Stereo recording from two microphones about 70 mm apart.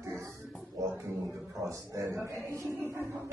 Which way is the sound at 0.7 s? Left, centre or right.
Right.